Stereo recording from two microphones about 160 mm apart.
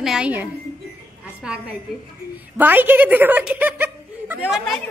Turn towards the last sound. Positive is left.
turn(degrees=0)  # may be behind; listen again after turning